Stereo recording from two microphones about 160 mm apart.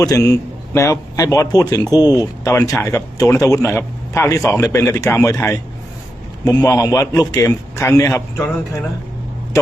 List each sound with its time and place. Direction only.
0.0 s a man's voice: 20° left (ahead or behind)